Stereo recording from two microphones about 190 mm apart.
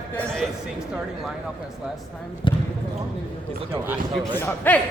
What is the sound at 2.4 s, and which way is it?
Speech, 25° left (ahead or behind).